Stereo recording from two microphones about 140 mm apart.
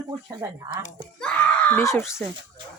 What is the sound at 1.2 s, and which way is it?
Speech, 10° left (ahead or behind).